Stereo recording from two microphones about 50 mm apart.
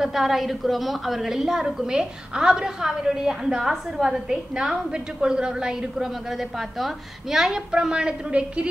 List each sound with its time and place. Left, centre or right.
0.0 s a woman's voice: centre; by 8.6 s right